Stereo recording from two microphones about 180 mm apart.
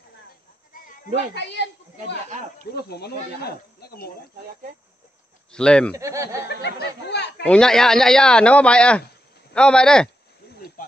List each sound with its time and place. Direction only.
1.3 s speech: 70° left (ahead or behind)
2.7 s speech: 60° left (ahead or behind)
5.5 s speech: 5° left (ahead or behind)
5.9 s speech: 15° right (ahead or behind)
6.5 s speech: 70° left (ahead or behind)
7.4 s speech: 5° left (ahead or behind)